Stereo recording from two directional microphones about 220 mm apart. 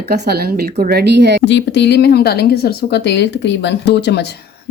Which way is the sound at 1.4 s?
50° left (ahead or behind).